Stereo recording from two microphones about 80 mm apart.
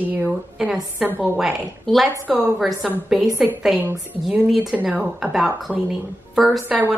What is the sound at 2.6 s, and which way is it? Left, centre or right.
A woman's voice, centre.